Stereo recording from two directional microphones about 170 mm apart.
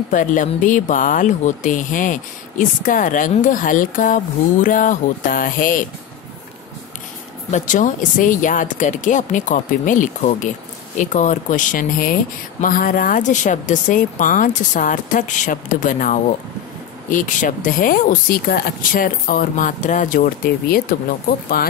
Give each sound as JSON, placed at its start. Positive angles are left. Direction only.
{"t": 0.1, "sound": "speech", "side_deg": 50}
{"t": 7.5, "sound": "speech", "side_deg": 45}